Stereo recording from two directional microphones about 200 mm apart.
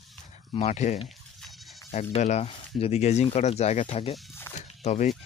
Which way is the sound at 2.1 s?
35° left (ahead or behind).